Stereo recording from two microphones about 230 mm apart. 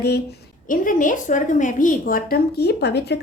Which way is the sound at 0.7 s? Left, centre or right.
Left.